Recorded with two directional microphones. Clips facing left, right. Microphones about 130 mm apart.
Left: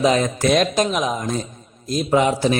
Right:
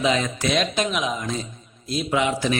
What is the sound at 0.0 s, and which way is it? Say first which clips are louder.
A man's voice: left 5 dB; 45° left (ahead or behind).